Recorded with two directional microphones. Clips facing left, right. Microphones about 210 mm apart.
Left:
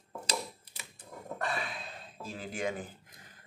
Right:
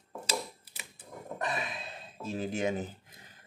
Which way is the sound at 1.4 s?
20° right (ahead or behind).